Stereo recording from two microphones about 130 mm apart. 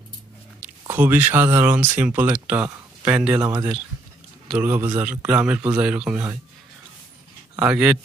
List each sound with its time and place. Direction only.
0.6 s speech: 15° right (ahead or behind)
3.3 s speech: 25° right (ahead or behind)
4.5 s speech: 10° right (ahead or behind)
7.5 s speech: 10° right (ahead or behind)